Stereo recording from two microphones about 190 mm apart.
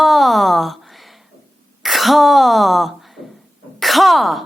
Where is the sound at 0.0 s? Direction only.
Centre (ahead or behind).